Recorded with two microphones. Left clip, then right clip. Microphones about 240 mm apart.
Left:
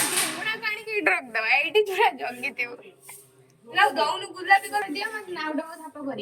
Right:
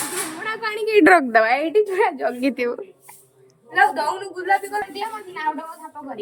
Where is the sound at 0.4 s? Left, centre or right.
Right.